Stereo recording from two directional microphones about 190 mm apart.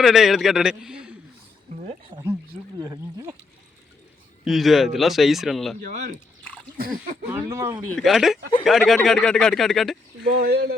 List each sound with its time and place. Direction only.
0.0 s a man's voice: centre (ahead or behind)
2.7 s speech: 20° right (ahead or behind)
4.4 s a man's voice: centre (ahead or behind)
5.8 s speech: 40° right (ahead or behind)
7.3 s speech: 15° right (ahead or behind)
7.9 s a man's voice: 5° left (ahead or behind)
10.2 s speech: 50° right (ahead or behind)